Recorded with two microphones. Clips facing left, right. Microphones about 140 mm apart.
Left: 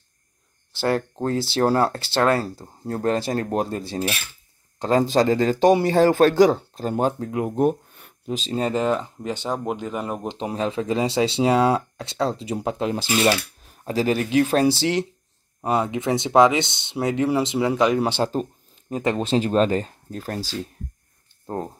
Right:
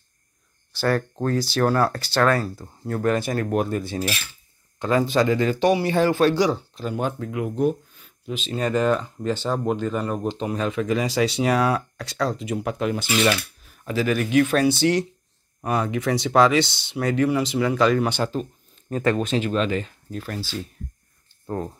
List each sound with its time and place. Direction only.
0.7 s speech: 20° left (ahead or behind); by 8.1 s 55° left (ahead or behind)
8.3 s speech: 35° left (ahead or behind)